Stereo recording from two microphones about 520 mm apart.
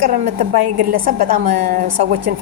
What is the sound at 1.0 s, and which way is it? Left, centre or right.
Speech, centre.